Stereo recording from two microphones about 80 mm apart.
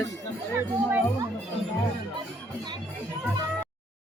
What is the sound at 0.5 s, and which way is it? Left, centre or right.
Speech, right.